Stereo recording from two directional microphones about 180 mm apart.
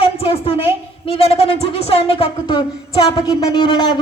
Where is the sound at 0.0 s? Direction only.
30° left (ahead or behind).